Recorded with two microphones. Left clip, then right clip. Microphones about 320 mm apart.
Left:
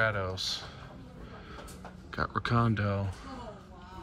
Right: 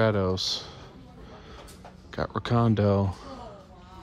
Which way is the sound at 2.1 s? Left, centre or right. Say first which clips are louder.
Right 2 dB; centre.